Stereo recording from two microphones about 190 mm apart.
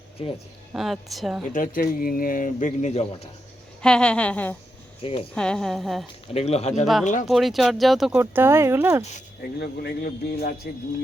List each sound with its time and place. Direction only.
0.7 s a woman's voice: centre (ahead or behind)
1.5 s speech: 45° left (ahead or behind)
3.8 s a woman's voice: 5° left (ahead or behind)
6.2 s speech: 35° left (ahead or behind)
7.3 s speech: centre (ahead or behind)
9.6 s speech: 55° left (ahead or behind)